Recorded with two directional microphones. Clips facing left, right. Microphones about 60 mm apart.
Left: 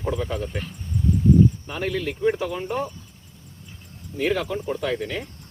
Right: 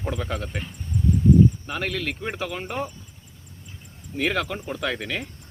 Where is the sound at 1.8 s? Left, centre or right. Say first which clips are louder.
Left 7 dB; right.